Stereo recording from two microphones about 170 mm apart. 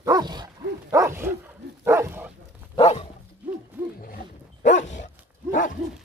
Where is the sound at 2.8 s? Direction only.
35° left (ahead or behind).